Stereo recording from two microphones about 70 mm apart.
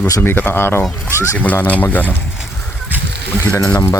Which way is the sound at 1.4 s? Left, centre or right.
Left.